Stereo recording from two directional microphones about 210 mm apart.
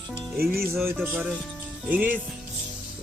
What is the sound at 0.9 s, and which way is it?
Speech, 10° right (ahead or behind).